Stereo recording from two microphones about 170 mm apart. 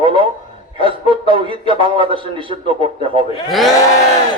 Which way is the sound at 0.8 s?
30° right (ahead or behind).